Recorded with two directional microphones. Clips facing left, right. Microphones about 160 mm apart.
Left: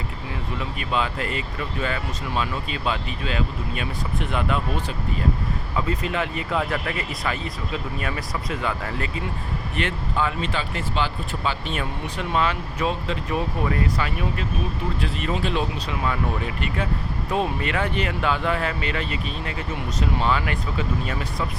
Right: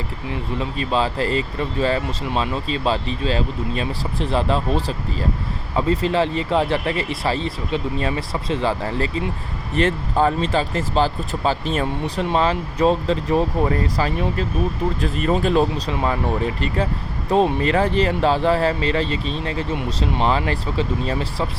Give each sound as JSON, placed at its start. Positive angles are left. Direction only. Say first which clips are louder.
{"t": 0.6, "sound": "speech", "louder": "right 5 dB", "side_deg": -30}